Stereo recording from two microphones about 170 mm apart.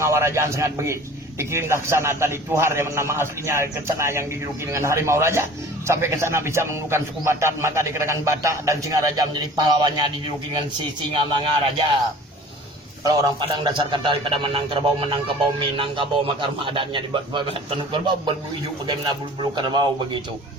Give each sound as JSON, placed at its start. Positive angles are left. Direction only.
{"t": 0.0, "sound": "a man's voice", "side_deg": -15}
{"t": 11.1, "sound": "a man's voice", "side_deg": -30}
{"t": 13.1, "sound": "a man's voice", "side_deg": -25}
{"t": 19.4, "sound": "a man's voice", "side_deg": -25}